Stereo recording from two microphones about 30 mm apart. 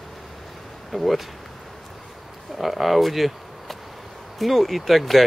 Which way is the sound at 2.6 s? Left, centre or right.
Centre.